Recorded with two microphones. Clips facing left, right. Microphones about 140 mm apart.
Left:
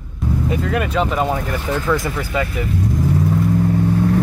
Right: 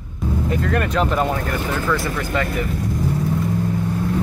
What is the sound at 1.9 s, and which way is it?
Speech, 15° left (ahead or behind).